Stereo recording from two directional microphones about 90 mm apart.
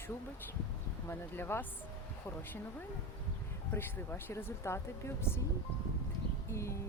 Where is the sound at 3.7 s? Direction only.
25° left (ahead or behind).